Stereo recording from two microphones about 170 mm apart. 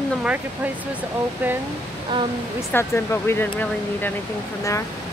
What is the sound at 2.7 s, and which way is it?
Speech, 15° left (ahead or behind).